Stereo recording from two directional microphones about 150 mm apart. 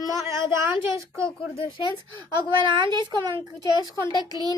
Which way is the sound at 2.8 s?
30° right (ahead or behind).